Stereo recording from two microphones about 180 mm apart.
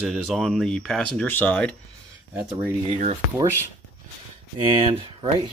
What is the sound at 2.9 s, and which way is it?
Speech, 45° right (ahead or behind).